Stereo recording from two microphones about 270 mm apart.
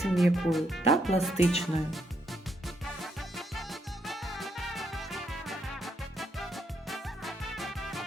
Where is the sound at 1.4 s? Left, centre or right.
Left.